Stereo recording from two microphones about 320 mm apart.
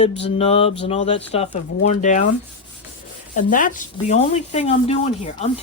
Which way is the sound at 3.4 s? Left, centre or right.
Left.